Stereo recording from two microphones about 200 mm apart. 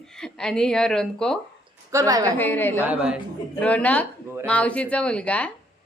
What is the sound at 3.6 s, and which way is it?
Speech, 5° left (ahead or behind).